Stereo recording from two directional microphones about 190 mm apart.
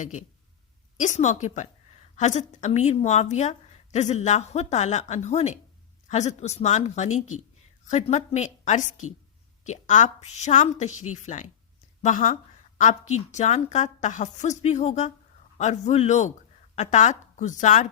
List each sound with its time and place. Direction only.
0.0 s a woman's voice: 40° left (ahead or behind)